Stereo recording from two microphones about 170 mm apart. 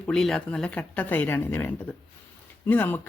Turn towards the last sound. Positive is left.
turn(degrees=10)  # may be behind; listen again after turning